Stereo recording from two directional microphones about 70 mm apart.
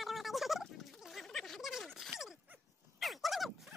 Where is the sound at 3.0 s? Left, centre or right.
Centre.